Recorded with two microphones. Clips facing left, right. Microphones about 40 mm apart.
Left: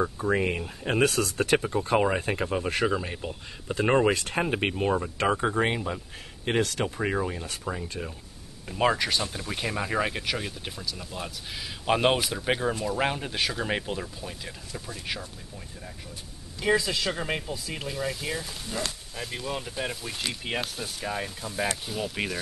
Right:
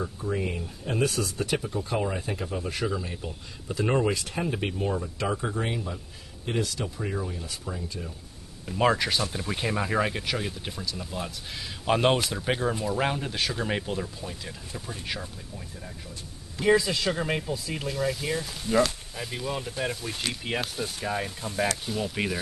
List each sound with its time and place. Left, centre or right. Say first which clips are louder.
0.2 s speech: left 4 dB; left
8.6 s speech: right 1 dB; centre
16.6 s speech: right 2 dB; centre